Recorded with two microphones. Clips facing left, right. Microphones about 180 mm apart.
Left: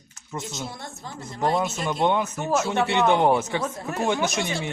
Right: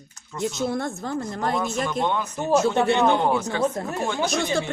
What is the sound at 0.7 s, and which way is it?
Speech, 55° right (ahead or behind).